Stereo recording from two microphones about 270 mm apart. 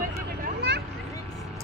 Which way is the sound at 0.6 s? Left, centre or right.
Right.